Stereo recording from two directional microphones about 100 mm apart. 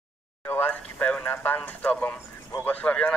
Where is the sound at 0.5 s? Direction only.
20° left (ahead or behind).